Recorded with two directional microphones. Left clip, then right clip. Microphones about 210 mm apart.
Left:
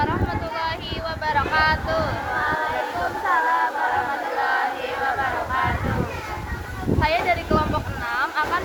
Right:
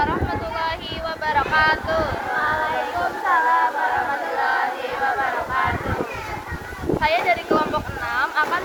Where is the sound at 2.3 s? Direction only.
15° right (ahead or behind).